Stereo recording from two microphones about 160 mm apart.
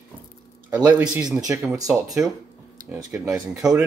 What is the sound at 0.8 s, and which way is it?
Speech, 10° right (ahead or behind).